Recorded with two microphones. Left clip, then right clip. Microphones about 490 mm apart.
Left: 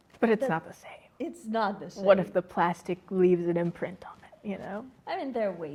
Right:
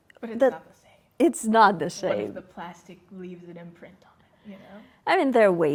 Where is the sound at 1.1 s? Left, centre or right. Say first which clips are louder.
Right 12 dB; right.